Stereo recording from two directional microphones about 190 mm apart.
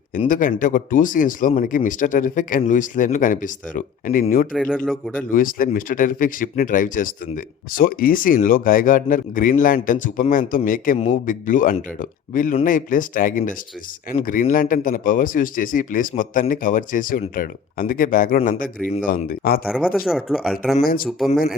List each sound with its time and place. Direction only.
0.3 s speech: 45° left (ahead or behind)
4.5 s speech: centre (ahead or behind)
5.3 s speech: 45° left (ahead or behind)
19.6 s speech: 5° right (ahead or behind)
20.8 s speech: 50° left (ahead or behind)